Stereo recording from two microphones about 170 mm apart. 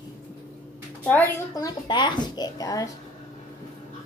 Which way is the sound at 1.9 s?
25° left (ahead or behind).